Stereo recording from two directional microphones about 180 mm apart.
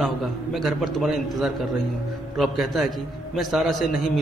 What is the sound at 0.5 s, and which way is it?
A man's voice, centre (ahead or behind).